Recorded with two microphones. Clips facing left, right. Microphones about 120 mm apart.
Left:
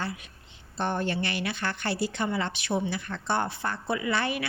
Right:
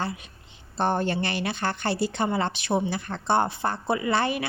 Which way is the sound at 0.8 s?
30° right (ahead or behind).